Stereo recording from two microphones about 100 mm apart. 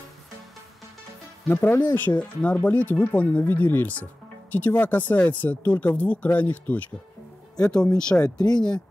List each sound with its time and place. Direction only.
1.5 s speech: 20° left (ahead or behind)
8.4 s speech: 40° left (ahead or behind)